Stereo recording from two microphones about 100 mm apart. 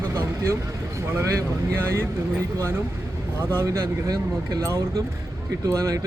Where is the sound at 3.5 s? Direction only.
30° right (ahead or behind).